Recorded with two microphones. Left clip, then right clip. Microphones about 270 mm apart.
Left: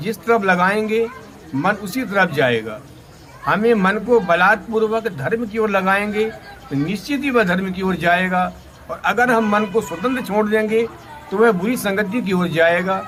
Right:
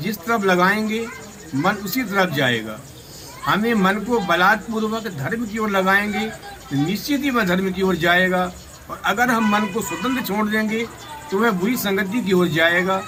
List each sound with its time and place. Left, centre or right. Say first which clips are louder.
0.0 s a man's voice: left 4 dB; centre